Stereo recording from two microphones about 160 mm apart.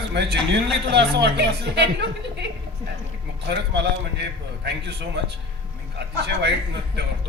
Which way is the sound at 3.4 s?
90° right.